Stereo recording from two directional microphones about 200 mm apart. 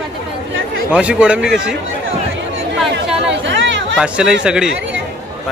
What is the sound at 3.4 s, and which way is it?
Chatter, 65° right (ahead or behind).